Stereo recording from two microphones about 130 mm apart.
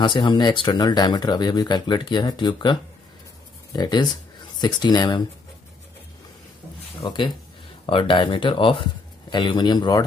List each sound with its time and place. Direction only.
0.0 s speech: 35° left (ahead or behind)
7.0 s speech: 35° left (ahead or behind)